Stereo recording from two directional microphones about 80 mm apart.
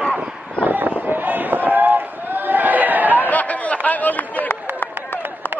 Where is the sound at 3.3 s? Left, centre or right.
Centre.